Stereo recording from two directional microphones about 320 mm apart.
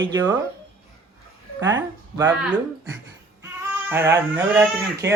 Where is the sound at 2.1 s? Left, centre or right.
Centre.